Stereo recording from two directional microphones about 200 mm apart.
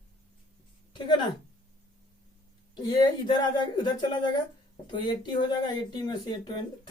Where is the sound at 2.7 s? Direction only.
20° left (ahead or behind).